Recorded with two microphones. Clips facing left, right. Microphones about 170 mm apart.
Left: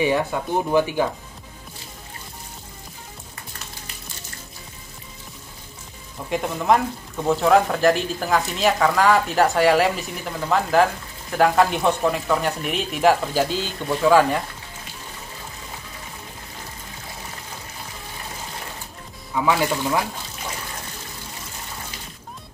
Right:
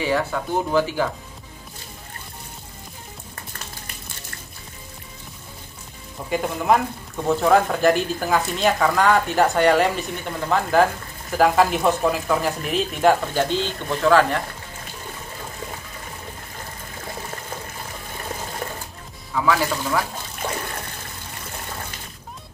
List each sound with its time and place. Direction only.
0.0 s speech: 15° left (ahead or behind)
6.3 s speech: centre (ahead or behind)
19.3 s speech: 15° left (ahead or behind)
20.4 s water: 55° right (ahead or behind)